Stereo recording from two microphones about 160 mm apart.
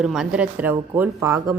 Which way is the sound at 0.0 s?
5° right (ahead or behind).